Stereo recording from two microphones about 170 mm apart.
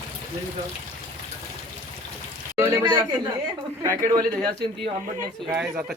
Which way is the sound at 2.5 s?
15° right (ahead or behind).